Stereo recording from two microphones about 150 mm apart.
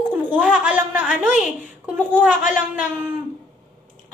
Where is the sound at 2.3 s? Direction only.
60° left (ahead or behind).